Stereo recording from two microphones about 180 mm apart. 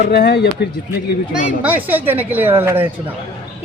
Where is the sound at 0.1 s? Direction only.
65° left (ahead or behind).